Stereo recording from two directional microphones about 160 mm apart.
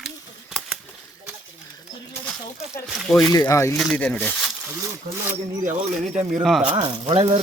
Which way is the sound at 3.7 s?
Centre (ahead or behind).